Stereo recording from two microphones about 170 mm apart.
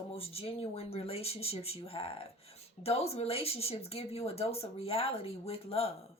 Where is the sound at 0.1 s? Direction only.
35° left (ahead or behind).